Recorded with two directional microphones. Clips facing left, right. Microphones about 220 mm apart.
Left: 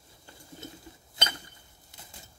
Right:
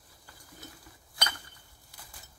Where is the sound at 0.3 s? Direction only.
25° left (ahead or behind).